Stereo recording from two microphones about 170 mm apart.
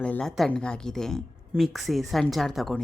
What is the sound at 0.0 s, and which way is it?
A woman's voice, 5° left (ahead or behind).